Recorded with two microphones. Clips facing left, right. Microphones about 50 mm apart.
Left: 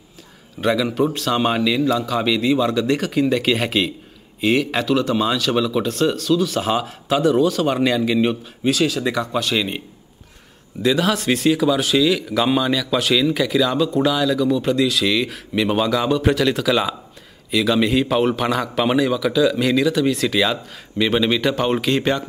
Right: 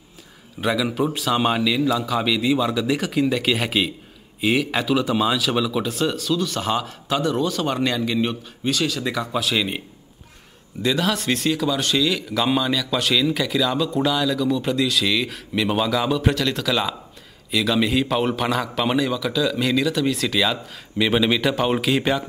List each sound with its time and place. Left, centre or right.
0.6 s speech: centre
10.8 s speech: centre